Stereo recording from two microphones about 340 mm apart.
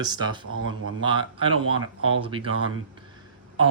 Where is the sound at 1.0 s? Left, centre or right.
Centre.